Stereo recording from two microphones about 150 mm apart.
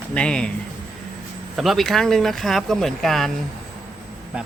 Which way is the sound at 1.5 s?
Centre (ahead or behind).